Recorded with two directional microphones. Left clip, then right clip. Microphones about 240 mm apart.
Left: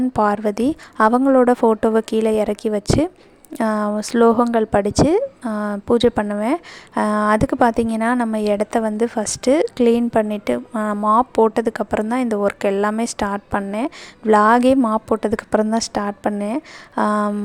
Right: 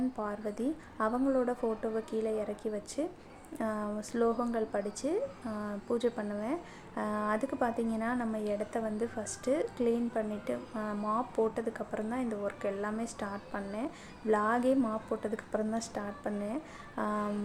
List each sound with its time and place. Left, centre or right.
0.2 s a woman's voice: left